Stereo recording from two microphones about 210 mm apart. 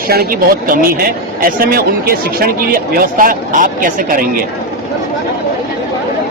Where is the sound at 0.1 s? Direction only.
45° right (ahead or behind).